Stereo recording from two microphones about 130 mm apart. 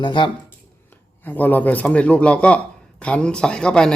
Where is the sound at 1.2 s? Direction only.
15° left (ahead or behind).